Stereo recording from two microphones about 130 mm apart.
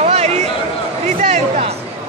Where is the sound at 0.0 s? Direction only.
55° right (ahead or behind).